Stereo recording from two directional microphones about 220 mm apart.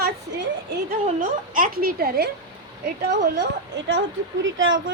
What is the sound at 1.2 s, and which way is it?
Speech, 35° right (ahead or behind).